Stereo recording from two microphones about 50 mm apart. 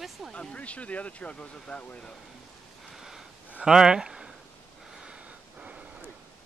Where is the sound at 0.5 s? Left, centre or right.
Left.